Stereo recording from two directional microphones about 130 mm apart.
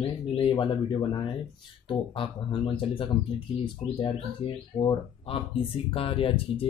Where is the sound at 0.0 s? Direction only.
40° left (ahead or behind).